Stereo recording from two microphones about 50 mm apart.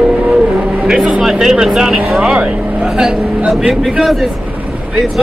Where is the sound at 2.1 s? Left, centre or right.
Centre.